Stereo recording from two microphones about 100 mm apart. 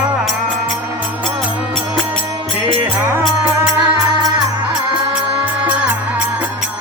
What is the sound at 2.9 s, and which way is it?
Music, 20° right (ahead or behind).